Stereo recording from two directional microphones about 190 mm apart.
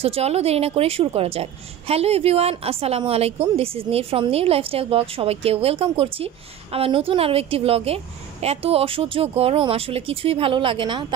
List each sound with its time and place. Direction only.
0.0 s a woman's voice: 30° right (ahead or behind)